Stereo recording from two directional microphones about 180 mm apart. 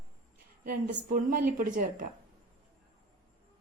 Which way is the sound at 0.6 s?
50° right (ahead or behind).